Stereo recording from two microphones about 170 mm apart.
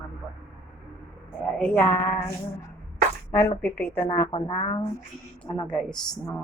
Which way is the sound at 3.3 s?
15° left (ahead or behind).